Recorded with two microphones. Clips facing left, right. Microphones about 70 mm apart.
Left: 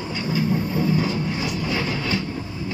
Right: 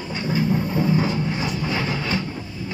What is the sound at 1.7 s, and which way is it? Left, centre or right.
Train, centre.